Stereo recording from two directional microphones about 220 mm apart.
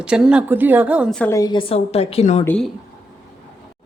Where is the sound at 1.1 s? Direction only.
10° left (ahead or behind); by 2.4 s 30° left (ahead or behind).